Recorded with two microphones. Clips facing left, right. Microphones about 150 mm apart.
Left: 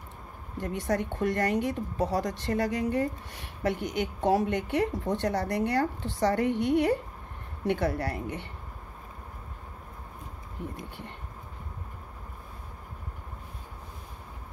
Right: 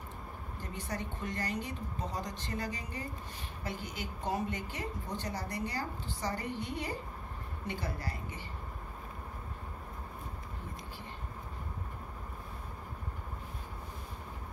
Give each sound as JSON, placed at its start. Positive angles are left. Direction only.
{"t": 0.6, "sound": "a woman's voice", "side_deg": 65}
{"t": 10.6, "sound": "a woman's voice", "side_deg": 65}